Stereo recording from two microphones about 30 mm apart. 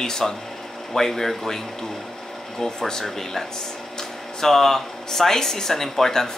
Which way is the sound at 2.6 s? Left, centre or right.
Centre.